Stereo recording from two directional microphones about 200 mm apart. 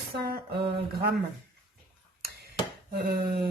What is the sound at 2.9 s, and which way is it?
Speech, 50° right (ahead or behind).